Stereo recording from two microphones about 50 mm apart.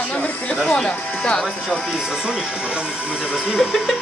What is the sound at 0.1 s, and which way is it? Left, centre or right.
Music, left.